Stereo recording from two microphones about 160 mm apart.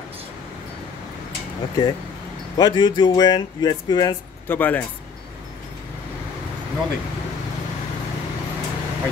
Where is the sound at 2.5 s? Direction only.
25° left (ahead or behind).